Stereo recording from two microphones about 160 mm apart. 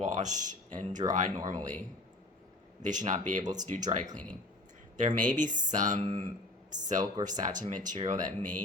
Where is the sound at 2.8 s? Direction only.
50° right (ahead or behind).